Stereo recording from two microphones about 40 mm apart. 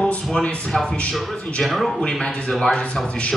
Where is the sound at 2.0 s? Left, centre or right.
Left.